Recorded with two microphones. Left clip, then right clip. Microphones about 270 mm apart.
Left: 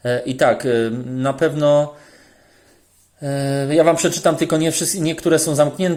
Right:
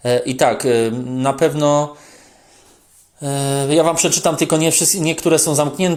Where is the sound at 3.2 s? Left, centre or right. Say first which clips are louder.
Right 2 dB; right.